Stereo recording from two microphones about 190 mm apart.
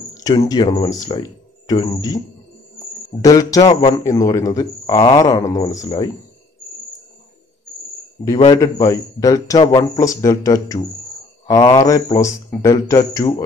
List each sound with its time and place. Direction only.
0.1 s a sound: 20° left (ahead or behind)
0.5 s speech: 20° left (ahead or behind)
8.5 s speech: 20° left (ahead or behind)